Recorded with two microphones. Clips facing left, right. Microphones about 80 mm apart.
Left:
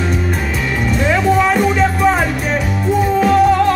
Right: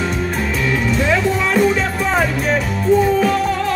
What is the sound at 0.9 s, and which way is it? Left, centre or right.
Music, centre.